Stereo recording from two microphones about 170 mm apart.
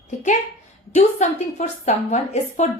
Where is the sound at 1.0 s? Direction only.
45° left (ahead or behind).